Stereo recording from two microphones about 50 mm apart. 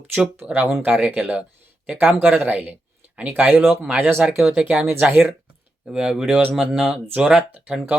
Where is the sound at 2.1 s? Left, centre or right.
Right.